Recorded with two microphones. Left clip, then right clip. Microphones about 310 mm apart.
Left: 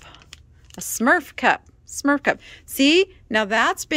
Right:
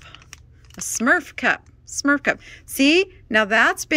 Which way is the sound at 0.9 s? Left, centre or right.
Centre.